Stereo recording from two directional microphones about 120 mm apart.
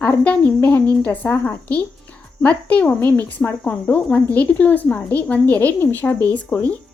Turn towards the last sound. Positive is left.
turn(degrees=10)  # may be behind; listen again after turning